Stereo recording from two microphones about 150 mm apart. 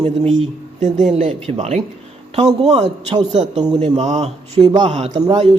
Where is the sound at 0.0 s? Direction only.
45° right (ahead or behind).